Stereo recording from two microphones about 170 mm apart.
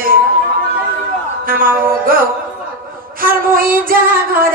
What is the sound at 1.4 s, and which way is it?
Speech, 55° right (ahead or behind).